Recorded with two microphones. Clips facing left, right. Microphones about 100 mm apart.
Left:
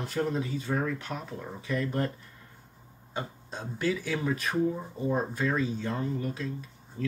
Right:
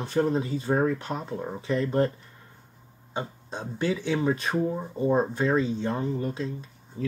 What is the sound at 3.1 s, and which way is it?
Speech, 20° right (ahead or behind).